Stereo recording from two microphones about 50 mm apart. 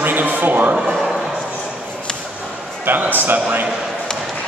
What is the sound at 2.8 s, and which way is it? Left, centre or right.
Speech, right.